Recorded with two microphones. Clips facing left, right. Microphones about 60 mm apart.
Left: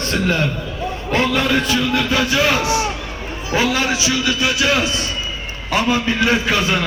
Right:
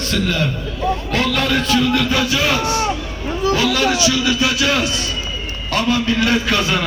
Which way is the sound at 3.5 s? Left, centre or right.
Left.